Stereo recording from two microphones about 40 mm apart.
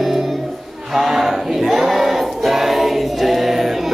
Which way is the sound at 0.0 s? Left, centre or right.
Centre.